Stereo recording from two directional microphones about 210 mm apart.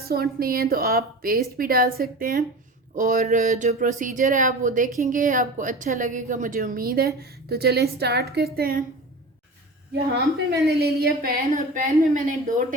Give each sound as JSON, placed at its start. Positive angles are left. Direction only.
{"t": 0.1, "sound": "a woman's voice", "side_deg": -45}
{"t": 10.3, "sound": "a woman's voice", "side_deg": -50}